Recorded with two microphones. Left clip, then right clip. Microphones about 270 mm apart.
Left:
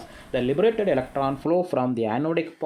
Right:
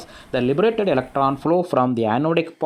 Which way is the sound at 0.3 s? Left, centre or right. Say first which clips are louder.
Right 3 dB; right.